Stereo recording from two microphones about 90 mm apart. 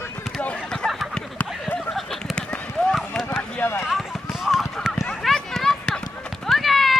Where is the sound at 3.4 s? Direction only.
15° left (ahead or behind).